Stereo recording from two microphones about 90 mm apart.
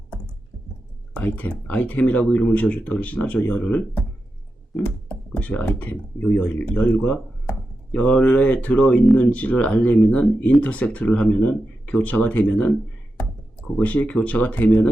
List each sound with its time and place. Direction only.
1.1 s speech: 15° left (ahead or behind)
5.0 s speech: 15° left (ahead or behind)
13.8 s speech: 15° left (ahead or behind)